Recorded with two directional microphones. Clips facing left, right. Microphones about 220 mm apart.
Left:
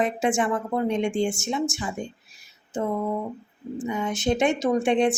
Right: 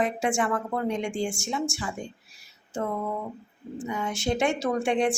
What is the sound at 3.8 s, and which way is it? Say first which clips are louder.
A woman's voice: left 3 dB; 20° left (ahead or behind).